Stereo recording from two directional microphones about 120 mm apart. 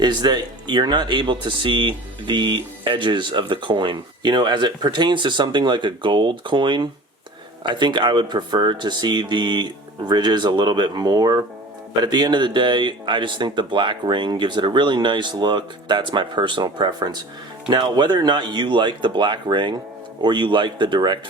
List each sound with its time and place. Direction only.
0.0 s speech: 40° right (ahead or behind)